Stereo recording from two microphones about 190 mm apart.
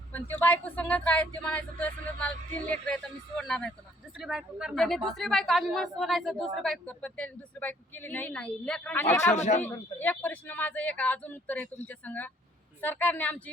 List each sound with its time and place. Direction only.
0.1 s a woman's voice: 10° left (ahead or behind)
9.3 s speech: 35° left (ahead or behind)
9.6 s speech: 10° left (ahead or behind)